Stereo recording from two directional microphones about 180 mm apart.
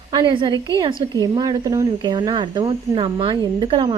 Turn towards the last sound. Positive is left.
turn(degrees=-30)  # may be behind; listen again after turning